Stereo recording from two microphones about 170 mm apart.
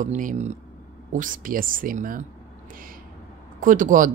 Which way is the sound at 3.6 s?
50° right (ahead or behind).